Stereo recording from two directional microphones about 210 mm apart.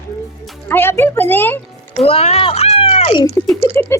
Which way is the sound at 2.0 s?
30° left (ahead or behind).